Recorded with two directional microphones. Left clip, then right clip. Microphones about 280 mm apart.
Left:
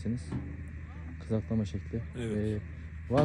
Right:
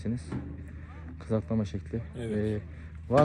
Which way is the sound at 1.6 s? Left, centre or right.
Centre.